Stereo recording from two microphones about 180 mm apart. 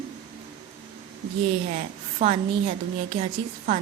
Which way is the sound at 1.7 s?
35° right (ahead or behind).